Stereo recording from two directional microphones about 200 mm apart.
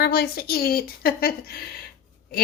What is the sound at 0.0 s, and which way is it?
A woman's voice, 50° left (ahead or behind).